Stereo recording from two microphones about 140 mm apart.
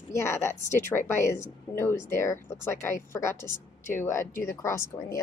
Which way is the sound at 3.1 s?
20° left (ahead or behind).